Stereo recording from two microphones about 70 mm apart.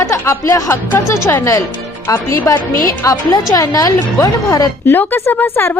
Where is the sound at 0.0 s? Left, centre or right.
Left.